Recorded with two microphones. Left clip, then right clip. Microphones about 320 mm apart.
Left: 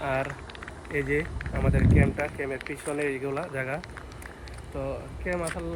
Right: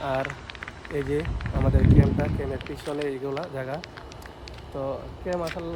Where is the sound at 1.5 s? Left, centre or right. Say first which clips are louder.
Right 2 dB; right.